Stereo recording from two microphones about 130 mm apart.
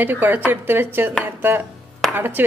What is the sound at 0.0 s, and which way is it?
A woman's voice, 15° right (ahead or behind).